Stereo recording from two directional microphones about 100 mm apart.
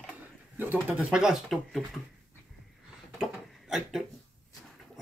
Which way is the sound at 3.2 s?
5° right (ahead or behind).